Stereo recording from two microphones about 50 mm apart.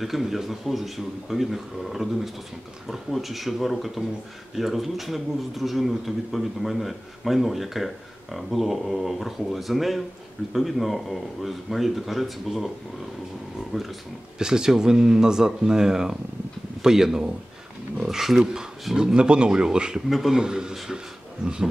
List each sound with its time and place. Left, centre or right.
0.0 s a man's voice: centre
4.0 s speech: right
4.6 s a man's voice: centre
14.4 s speech: centre
20.1 s a man's voice: centre
20.3 s speech: centre
20.7 s a man's voice: centre